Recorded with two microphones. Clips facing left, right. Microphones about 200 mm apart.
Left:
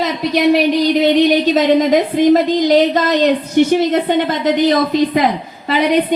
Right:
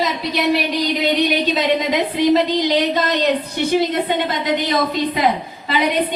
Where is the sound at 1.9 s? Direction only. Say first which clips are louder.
Left 5 dB; 50° left (ahead or behind).